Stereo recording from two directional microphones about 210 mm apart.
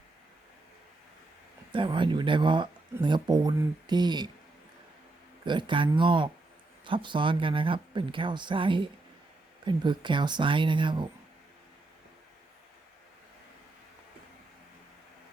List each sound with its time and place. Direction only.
1.7 s speech: 25° right (ahead or behind)
5.5 s speech: 20° right (ahead or behind)